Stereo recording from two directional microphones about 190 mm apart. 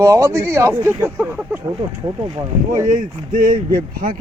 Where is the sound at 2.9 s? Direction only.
45° right (ahead or behind).